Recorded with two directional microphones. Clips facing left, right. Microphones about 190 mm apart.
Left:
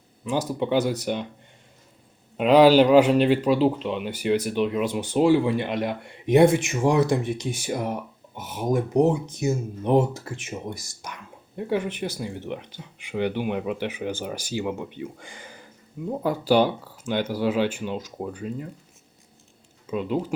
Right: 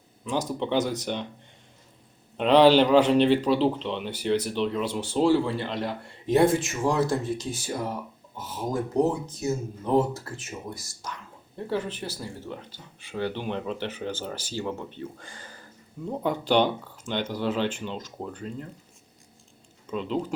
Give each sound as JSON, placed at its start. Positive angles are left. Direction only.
{"t": 0.3, "sound": "speech", "side_deg": 10}
{"t": 2.4, "sound": "speech", "side_deg": 10}
{"t": 19.9, "sound": "speech", "side_deg": 10}